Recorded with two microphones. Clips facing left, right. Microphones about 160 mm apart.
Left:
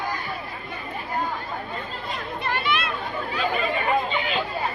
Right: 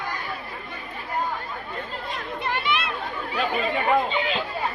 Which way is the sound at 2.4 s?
20° right (ahead or behind).